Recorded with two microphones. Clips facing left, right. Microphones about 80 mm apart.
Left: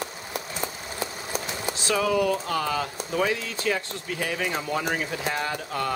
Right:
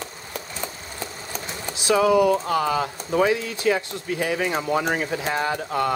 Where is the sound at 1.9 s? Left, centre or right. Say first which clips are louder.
Right 6 dB; centre.